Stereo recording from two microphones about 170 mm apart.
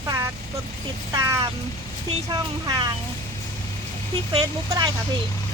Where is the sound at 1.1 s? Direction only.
20° right (ahead or behind).